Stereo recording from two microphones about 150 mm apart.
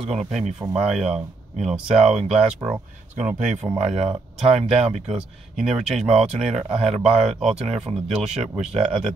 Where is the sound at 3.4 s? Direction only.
50° right (ahead or behind).